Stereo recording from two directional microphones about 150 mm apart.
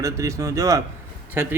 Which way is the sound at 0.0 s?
20° right (ahead or behind).